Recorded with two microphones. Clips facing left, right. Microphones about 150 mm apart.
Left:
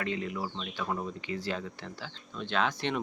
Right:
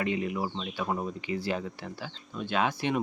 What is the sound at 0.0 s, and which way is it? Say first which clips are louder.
Speech: right 4 dB; 15° right (ahead or behind).